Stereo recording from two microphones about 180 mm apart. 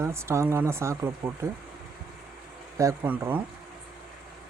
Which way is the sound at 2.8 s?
15° right (ahead or behind).